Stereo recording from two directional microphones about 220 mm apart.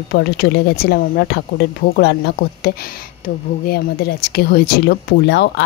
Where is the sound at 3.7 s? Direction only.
45° left (ahead or behind).